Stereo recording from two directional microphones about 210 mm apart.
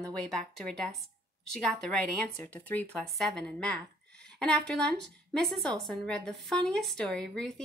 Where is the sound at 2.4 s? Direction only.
5° left (ahead or behind).